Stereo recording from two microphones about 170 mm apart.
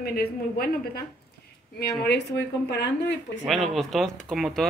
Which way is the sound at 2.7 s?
90° left.